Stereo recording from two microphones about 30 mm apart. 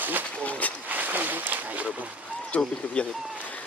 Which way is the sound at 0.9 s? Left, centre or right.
Right.